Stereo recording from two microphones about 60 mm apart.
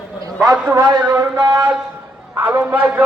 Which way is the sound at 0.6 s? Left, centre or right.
Right.